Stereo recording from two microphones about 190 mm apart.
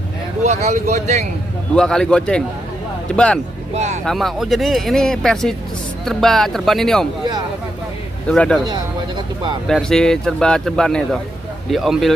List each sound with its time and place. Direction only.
0.4 s speech: 35° right (ahead or behind)
1.8 s speech: 5° left (ahead or behind)
3.7 s speech: 35° right (ahead or behind)
4.0 s speech: centre (ahead or behind)
8.3 s speech: 5° left (ahead or behind)
9.7 s speech: 5° left (ahead or behind)